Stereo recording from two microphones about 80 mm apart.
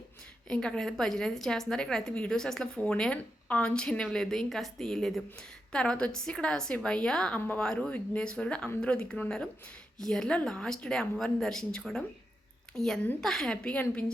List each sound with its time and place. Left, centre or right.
0.4 s a woman's voice: centre